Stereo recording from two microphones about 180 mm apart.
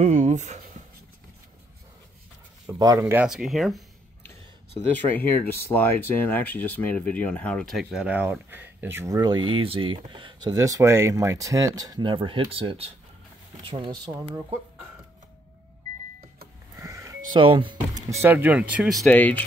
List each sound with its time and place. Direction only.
0.0 s a sound: 40° right (ahead or behind)
2.8 s speech: 20° right (ahead or behind)
3.3 s speech: centre (ahead or behind)
4.9 s speech: 10° left (ahead or behind); by 13.9 s 25° right (ahead or behind)
16.7 s sheep: 15° right (ahead or behind)
17.3 s speech: 30° right (ahead or behind)
18.2 s speech: 10° right (ahead or behind)
19.0 s speech: 10° left (ahead or behind)